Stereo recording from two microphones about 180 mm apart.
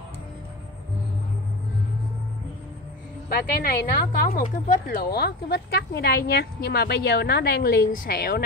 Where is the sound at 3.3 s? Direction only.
60° left (ahead or behind).